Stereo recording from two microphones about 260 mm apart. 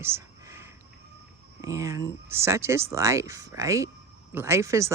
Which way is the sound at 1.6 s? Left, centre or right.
Centre.